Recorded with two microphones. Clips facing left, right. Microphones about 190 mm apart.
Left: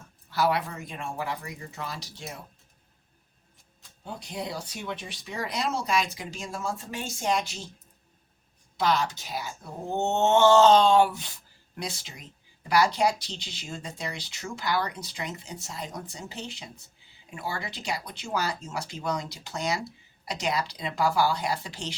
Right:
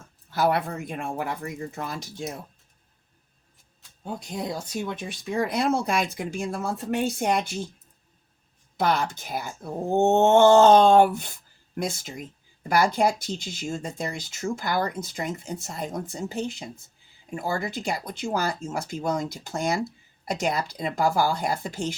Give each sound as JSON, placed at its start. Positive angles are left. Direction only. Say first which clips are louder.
{"t": 0.3, "sound": "speech", "louder": "right 3 dB", "side_deg": -50}
{"t": 4.0, "sound": "speech", "louder": "right 4 dB", "side_deg": -50}
{"t": 8.8, "sound": "speech", "louder": "right 2 dB", "side_deg": -55}